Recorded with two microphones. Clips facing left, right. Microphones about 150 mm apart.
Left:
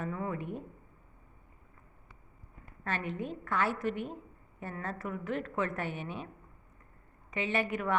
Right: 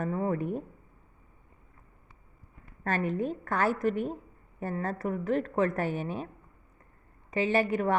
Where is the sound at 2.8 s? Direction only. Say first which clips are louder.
Right 7 dB; 40° right (ahead or behind).